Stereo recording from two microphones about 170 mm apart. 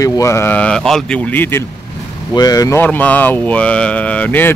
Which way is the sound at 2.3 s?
20° left (ahead or behind).